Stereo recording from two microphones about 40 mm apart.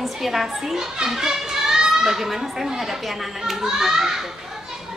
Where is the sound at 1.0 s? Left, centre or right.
Centre.